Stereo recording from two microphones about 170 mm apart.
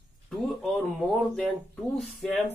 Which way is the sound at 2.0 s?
Centre (ahead or behind).